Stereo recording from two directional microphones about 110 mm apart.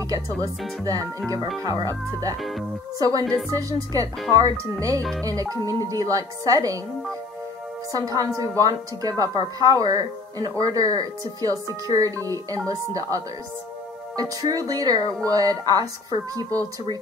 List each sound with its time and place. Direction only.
0.1 s speech: 35° right (ahead or behind)
7.9 s speech: 35° right (ahead or behind)
14.4 s speech: 35° right (ahead or behind)